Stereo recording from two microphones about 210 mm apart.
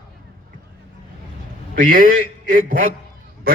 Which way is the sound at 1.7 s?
40° right (ahead or behind).